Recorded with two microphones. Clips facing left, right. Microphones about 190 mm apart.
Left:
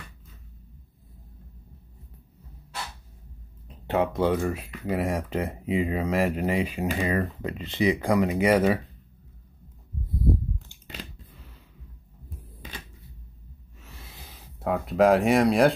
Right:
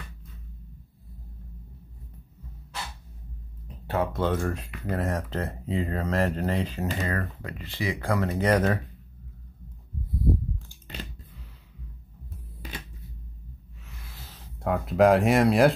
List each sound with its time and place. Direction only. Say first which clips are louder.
3.6 s speech: left 3 dB; 20° left (ahead or behind)
7.2 s speech: left 5 dB; 20° left (ahead or behind)
14.0 s speech: even; 15° left (ahead or behind); by 15.7 s centre (ahead or behind)